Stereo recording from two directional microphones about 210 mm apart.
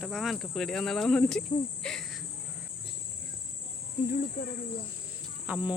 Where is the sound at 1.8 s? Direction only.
5° left (ahead or behind).